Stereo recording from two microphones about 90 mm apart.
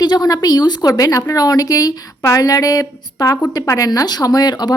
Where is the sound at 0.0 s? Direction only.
45° left (ahead or behind).